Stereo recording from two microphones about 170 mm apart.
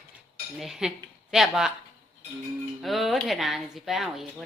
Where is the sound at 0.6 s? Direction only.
Centre (ahead or behind).